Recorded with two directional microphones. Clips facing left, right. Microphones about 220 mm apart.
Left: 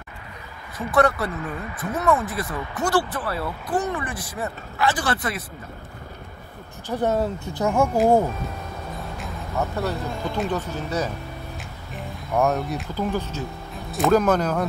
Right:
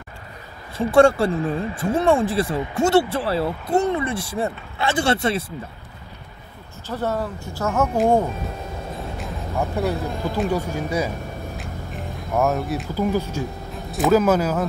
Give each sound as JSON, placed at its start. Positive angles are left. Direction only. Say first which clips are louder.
{"t": 0.7, "sound": "speech", "louder": "right 6 dB", "side_deg": -30}
{"t": 6.9, "sound": "speech", "louder": "left 2 dB", "side_deg": 20}
{"t": 9.6, "sound": "speech", "louder": "right 3 dB", "side_deg": -10}
{"t": 11.5, "sound": "a sound", "louder": "right 4 dB", "side_deg": 0}
{"t": 13.9, "sound": "speech", "louder": "right 2 dB", "side_deg": -5}